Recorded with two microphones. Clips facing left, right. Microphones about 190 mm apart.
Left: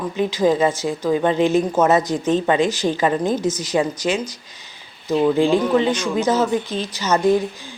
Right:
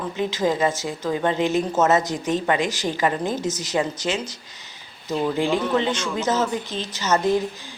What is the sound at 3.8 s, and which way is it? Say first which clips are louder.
Speech: left 3 dB; 15° left (ahead or behind).